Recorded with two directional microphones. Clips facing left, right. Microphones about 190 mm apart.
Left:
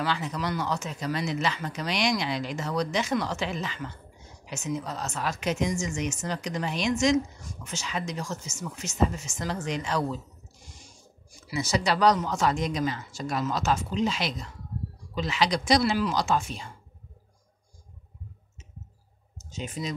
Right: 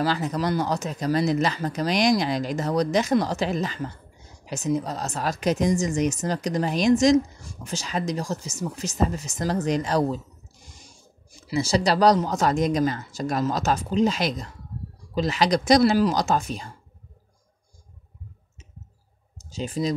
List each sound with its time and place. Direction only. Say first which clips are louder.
0.0 s a woman's voice: right 5 dB; 40° right (ahead or behind)
11.4 s a woman's voice: right 5 dB; 30° right (ahead or behind)
19.5 s a woman's voice: right 7 dB; 35° right (ahead or behind)